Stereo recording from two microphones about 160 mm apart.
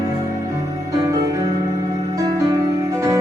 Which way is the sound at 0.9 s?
20° right (ahead or behind).